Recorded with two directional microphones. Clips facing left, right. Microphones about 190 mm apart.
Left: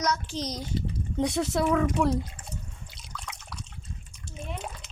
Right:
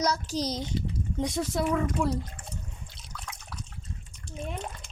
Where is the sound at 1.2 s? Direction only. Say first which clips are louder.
Left 3 dB; 70° left (ahead or behind).